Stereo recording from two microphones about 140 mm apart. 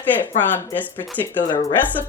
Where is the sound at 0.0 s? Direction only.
15° left (ahead or behind).